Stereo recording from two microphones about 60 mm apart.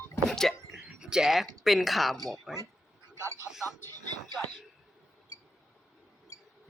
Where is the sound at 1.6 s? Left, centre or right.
Centre.